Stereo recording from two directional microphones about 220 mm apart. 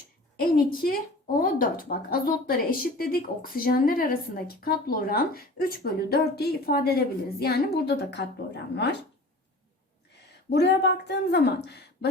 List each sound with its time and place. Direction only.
0.3 s a woman's voice: 40° left (ahead or behind)
10.5 s speech: 50° left (ahead or behind)